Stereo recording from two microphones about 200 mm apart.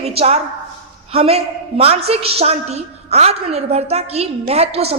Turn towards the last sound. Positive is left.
turn(degrees=-30)  # may be behind; listen again after turning